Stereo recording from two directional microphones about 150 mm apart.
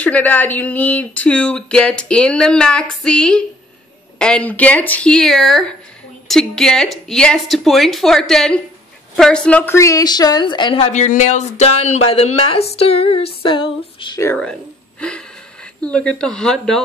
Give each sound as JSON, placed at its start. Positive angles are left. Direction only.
{"t": 0.0, "sound": "a woman's voice", "side_deg": 10}
{"t": 10.9, "sound": "speech", "side_deg": 50}
{"t": 13.5, "sound": "a sound", "side_deg": 35}
{"t": 14.2, "sound": "speech", "side_deg": 10}